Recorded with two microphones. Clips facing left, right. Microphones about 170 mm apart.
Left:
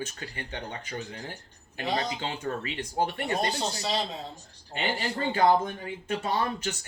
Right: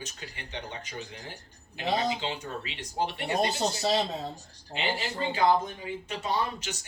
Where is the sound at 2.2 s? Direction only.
50° left (ahead or behind).